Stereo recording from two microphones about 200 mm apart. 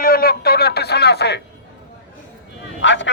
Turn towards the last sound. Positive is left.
turn(degrees=65)  # may be behind; listen again after turning